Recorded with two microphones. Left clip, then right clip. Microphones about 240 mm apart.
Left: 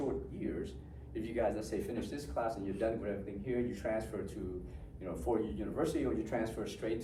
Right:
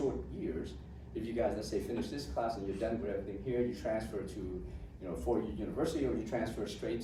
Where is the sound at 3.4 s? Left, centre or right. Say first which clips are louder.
Right 1 dB; left.